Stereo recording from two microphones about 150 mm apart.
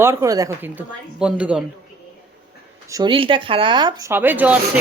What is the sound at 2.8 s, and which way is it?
Speech, 25° right (ahead or behind).